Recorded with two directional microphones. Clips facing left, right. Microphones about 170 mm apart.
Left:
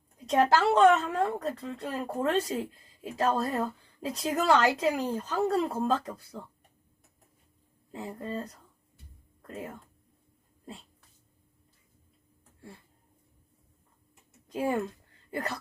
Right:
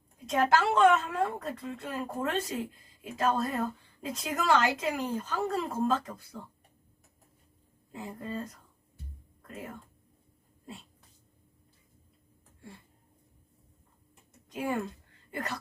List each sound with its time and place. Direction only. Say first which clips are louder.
0.3 s a woman's voice: left 2 dB; 35° left (ahead or behind)
8.0 s a woman's voice: left 2 dB; 35° left (ahead or behind)
14.5 s speech: left 3 dB; 30° left (ahead or behind)